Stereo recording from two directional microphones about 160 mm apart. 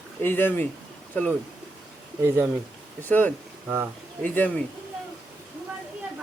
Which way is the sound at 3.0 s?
10° left (ahead or behind).